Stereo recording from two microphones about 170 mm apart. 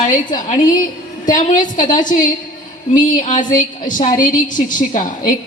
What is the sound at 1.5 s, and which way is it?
Speech, 50° left (ahead or behind).